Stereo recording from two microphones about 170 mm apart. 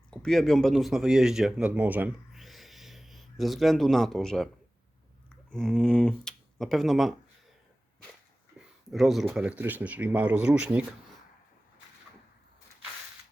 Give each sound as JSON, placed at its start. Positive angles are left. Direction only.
{"t": 0.1, "sound": "speech", "side_deg": 5}
{"t": 5.5, "sound": "speech", "side_deg": 0}
{"t": 8.5, "sound": "speech", "side_deg": 0}